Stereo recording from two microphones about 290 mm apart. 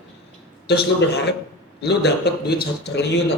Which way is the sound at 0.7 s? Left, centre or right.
Left.